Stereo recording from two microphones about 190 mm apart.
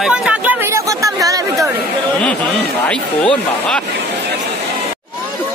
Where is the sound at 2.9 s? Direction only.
5° left (ahead or behind).